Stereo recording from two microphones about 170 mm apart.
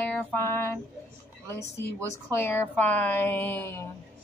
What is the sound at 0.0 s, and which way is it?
Music, 10° left (ahead or behind).